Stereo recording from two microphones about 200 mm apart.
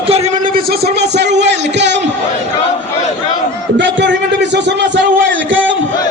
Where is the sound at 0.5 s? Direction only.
50° right (ahead or behind).